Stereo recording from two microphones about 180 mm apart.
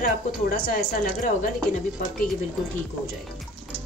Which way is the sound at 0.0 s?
55° left (ahead or behind).